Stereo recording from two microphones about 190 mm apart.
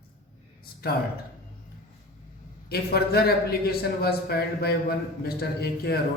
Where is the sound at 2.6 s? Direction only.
55° left (ahead or behind).